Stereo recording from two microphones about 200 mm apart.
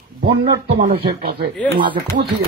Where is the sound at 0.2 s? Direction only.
55° right (ahead or behind).